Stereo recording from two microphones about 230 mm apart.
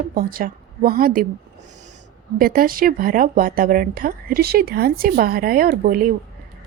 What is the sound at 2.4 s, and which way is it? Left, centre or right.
Speech, right.